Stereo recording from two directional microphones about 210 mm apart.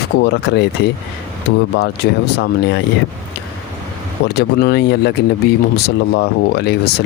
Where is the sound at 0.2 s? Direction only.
50° left (ahead or behind).